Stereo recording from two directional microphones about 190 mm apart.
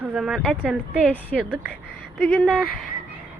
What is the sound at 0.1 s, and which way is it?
Speech, 5° right (ahead or behind).